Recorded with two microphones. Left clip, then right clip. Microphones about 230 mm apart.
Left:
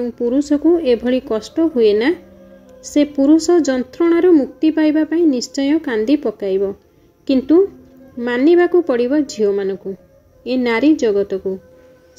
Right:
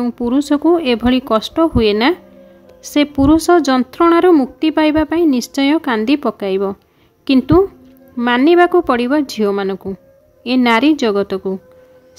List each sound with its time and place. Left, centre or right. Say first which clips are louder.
0.0 s a woman's voice: even; right